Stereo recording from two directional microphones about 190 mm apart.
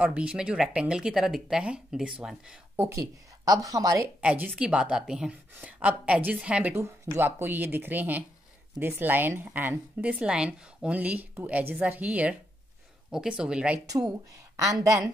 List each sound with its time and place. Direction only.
0.0 s a woman's voice: 5° right (ahead or behind)
4.2 s a woman's voice: 5° right (ahead or behind)
13.8 s a woman's voice: 20° right (ahead or behind)